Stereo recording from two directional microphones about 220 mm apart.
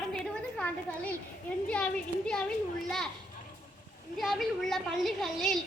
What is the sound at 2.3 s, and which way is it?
Speech, 5° left (ahead or behind).